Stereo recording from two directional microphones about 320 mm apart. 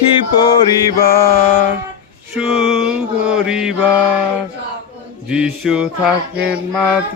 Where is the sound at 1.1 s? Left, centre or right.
Centre.